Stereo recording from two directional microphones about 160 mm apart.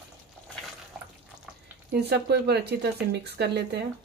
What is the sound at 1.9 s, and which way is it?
Speech, 90° right.